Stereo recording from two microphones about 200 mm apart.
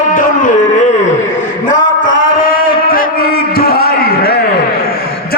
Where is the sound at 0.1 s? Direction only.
40° left (ahead or behind).